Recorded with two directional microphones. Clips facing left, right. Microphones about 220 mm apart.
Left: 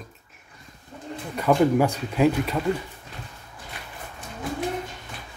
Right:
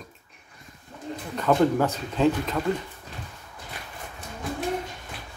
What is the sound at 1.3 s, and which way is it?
Speech, 10° left (ahead or behind).